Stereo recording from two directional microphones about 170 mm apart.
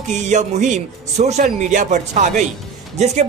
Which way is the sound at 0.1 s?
45° right (ahead or behind).